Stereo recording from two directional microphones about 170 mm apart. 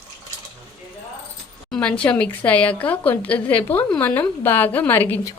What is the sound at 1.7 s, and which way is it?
A woman's voice, 5° left (ahead or behind).